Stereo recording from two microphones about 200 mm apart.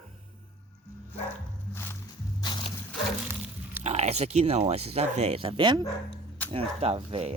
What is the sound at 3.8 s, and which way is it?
Speech, 35° right (ahead or behind).